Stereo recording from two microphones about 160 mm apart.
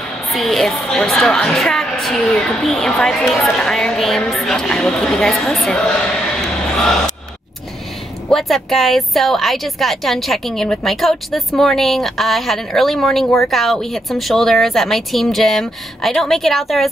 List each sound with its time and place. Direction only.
0.3 s a woman's voice: centre (ahead or behind)
8.3 s a woman's voice: centre (ahead or behind)